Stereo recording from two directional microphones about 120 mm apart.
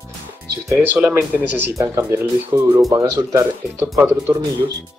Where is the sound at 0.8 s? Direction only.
15° right (ahead or behind).